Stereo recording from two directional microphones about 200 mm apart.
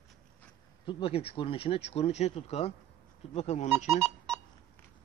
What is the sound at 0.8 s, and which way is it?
Speech, 25° left (ahead or behind).